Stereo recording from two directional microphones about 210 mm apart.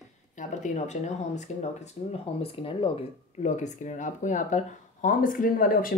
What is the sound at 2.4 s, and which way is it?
Speech, 25° left (ahead or behind).